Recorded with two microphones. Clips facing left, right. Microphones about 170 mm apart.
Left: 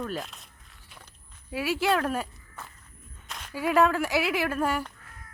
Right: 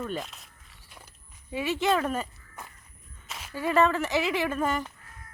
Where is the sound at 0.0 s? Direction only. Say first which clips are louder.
Even; centre (ahead or behind).